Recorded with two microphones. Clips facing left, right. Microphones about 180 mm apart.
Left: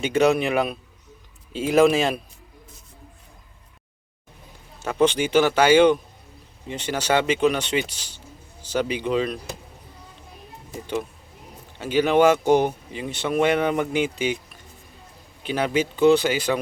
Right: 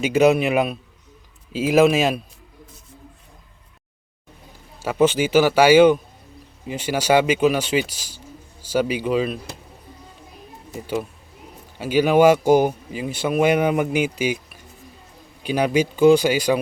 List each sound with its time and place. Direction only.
0.0 s speech: 10° right (ahead or behind)
4.8 s speech: 10° right (ahead or behind)
11.8 s speech: 10° right (ahead or behind)